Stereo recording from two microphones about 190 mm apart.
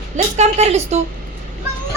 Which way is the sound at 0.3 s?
35° right (ahead or behind).